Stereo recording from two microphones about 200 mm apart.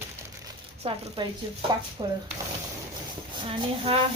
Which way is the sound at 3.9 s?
25° right (ahead or behind).